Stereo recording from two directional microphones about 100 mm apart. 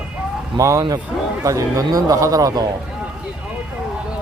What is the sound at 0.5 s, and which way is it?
Speech, 35° right (ahead or behind).